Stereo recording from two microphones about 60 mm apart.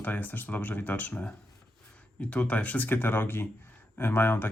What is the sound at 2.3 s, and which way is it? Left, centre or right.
Speech, left.